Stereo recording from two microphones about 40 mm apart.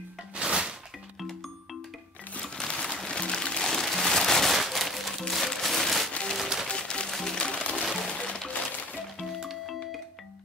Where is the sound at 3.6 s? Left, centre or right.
Centre.